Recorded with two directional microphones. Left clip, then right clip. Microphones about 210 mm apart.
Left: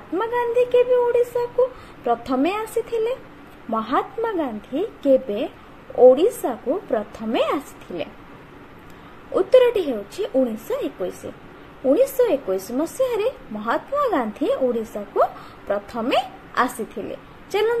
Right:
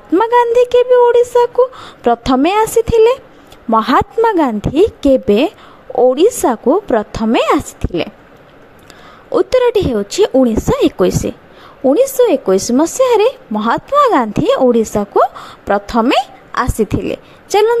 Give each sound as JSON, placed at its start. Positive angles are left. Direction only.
{"t": 0.1, "sound": "a woman's voice", "side_deg": -45}
{"t": 9.3, "sound": "a woman's voice", "side_deg": -45}